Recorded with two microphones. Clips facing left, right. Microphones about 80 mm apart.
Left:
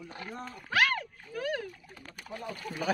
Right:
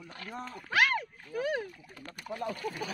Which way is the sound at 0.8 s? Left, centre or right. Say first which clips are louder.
Even; centre.